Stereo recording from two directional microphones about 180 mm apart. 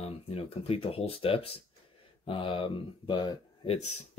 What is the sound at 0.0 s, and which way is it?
Speech, 30° left (ahead or behind).